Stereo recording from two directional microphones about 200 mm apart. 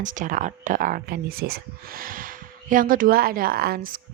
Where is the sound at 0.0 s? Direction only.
40° right (ahead or behind).